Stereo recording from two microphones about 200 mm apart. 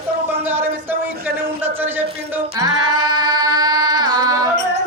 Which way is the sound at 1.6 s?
10° right (ahead or behind).